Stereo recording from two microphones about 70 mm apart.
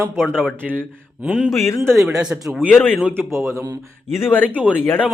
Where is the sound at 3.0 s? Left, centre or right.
Right.